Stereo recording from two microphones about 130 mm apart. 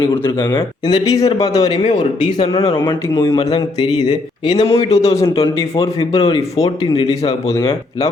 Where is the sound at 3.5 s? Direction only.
30° left (ahead or behind).